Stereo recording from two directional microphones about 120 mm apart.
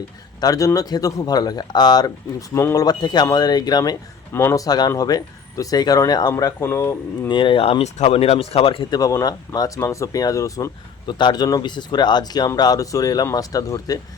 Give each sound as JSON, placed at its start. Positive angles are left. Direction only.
{"t": 0.4, "sound": "speech", "side_deg": 30}
{"t": 2.8, "sound": "speech", "side_deg": 35}
{"t": 4.4, "sound": "speech", "side_deg": 20}
{"t": 4.6, "sound": "speech", "side_deg": 30}
{"t": 6.6, "sound": "speech", "side_deg": 20}
{"t": 7.3, "sound": "speech", "side_deg": 45}
{"t": 8.9, "sound": "speech", "side_deg": 30}
{"t": 11.0, "sound": "speech", "side_deg": 40}